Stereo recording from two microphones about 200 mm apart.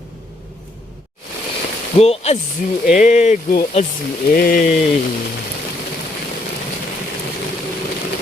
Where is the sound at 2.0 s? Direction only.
30° left (ahead or behind).